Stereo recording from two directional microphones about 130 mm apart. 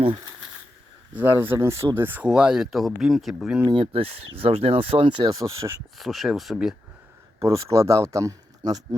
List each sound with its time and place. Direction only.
1.1 s speech: 15° right (ahead or behind)
3.7 s speech: 45° right (ahead or behind)
5.2 s speech: 30° right (ahead or behind)
6.0 s speech: centre (ahead or behind)
7.4 s speech: 25° right (ahead or behind)